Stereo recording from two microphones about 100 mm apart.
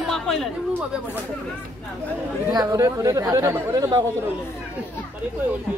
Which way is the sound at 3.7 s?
40° right (ahead or behind).